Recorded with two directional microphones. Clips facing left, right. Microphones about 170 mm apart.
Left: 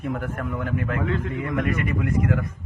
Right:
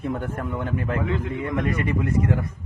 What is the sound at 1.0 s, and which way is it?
A man's voice, 20° right (ahead or behind).